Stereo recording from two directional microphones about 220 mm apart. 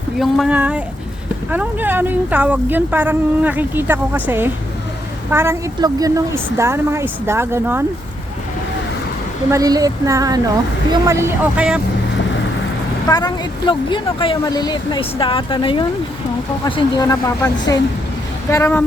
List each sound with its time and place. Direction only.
0.2 s speech: centre (ahead or behind)
9.5 s speech: 15° right (ahead or behind)
13.1 s speech: 20° left (ahead or behind)